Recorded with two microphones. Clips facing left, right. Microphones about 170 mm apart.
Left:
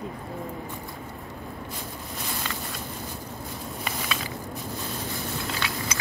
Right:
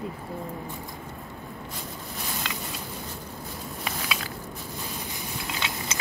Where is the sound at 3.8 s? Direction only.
Centre (ahead or behind).